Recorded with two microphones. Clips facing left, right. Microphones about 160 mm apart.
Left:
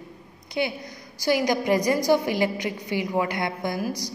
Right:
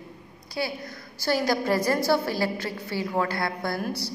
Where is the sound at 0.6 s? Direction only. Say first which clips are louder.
Left 3 dB; 20° left (ahead or behind).